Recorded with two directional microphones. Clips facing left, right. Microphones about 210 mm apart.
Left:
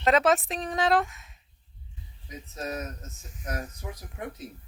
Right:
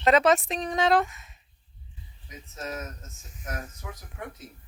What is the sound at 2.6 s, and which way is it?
Speech, 35° left (ahead or behind).